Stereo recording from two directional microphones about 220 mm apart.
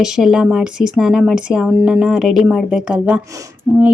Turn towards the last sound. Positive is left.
turn(degrees=-10)  # may be behind; listen again after turning